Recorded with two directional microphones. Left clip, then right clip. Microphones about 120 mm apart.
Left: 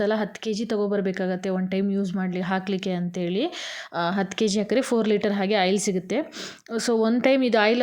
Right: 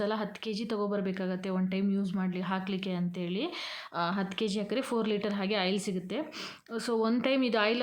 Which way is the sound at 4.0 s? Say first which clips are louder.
Left 7 dB; 50° left (ahead or behind).